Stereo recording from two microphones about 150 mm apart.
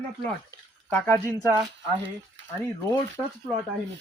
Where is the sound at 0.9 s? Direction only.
10° left (ahead or behind).